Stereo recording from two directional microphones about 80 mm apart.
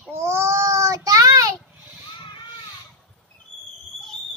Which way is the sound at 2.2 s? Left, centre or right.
Left.